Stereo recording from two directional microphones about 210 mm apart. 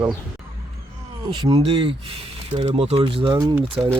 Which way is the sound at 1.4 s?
25° right (ahead or behind).